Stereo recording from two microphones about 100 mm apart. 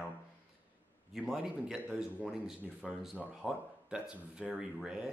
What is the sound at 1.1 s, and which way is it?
Speech, 5° right (ahead or behind).